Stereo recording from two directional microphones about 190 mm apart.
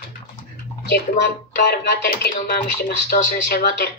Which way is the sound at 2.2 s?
55° left (ahead or behind).